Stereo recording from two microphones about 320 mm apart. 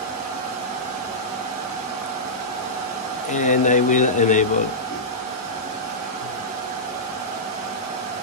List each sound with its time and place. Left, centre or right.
3.3 s speech: left